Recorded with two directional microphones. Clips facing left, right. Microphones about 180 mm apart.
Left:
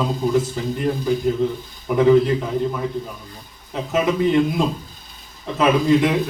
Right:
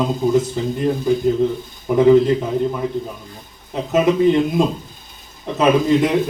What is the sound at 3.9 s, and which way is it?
Speech, 20° right (ahead or behind).